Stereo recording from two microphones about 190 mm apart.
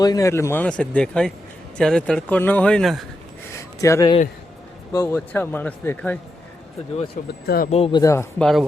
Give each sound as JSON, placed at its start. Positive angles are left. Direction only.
{"t": 0.0, "sound": "speech", "side_deg": 20}
{"t": 3.8, "sound": "a man's voice", "side_deg": 15}
{"t": 7.4, "sound": "speech", "side_deg": 55}
{"t": 7.7, "sound": "speech", "side_deg": 30}
{"t": 8.0, "sound": "speech", "side_deg": 15}